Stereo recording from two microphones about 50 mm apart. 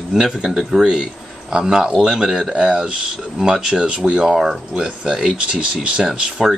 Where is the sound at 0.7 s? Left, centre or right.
Centre.